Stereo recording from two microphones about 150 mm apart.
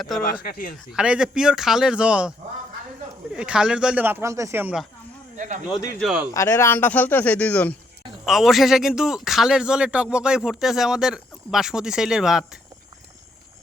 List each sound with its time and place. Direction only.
0.4 s speech: 75° left (ahead or behind)
0.9 s a man's voice: 5° right (ahead or behind)
3.3 s speech: 5° right (ahead or behind)
6.0 s a man's voice: 5° right (ahead or behind)
6.3 s speech: 20° left (ahead or behind)
8.2 s a man's voice: centre (ahead or behind)